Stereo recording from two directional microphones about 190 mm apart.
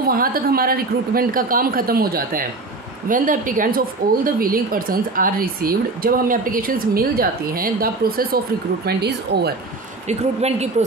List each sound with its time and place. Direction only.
0.0 s a woman's voice: 50° right (ahead or behind)
10.0 s a woman's voice: 35° right (ahead or behind)